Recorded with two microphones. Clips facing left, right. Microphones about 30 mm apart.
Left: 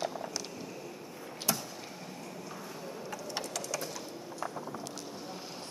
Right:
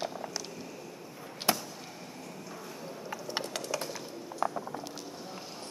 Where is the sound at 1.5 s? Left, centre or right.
Right.